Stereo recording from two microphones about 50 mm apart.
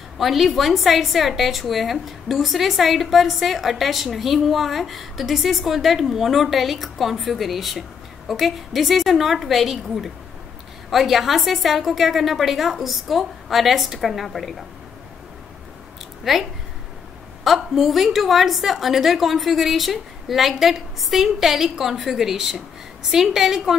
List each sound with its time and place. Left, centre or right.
0.2 s a woman's voice: centre
16.3 s a woman's voice: centre